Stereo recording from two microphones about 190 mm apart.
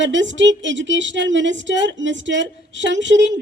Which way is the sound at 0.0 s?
75° right (ahead or behind).